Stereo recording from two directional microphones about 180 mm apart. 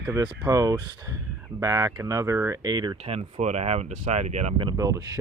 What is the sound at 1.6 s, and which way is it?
Speech, 20° right (ahead or behind).